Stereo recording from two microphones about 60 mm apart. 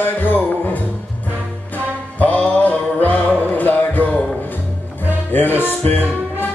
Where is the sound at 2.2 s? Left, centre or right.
Left.